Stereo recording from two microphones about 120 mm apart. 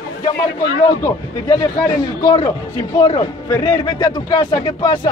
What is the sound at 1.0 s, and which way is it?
Speech, 30° left (ahead or behind).